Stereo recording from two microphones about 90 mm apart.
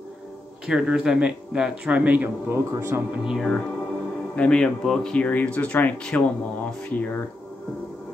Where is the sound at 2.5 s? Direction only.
30° right (ahead or behind).